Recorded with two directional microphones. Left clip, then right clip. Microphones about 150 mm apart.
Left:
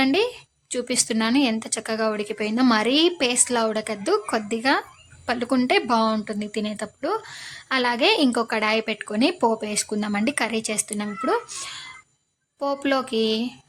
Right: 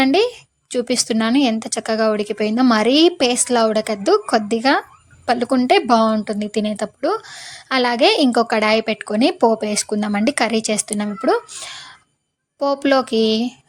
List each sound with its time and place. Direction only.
0.0 s a woman's voice: 30° right (ahead or behind)
11.6 s a sound: 30° right (ahead or behind)
12.5 s speech: 30° right (ahead or behind)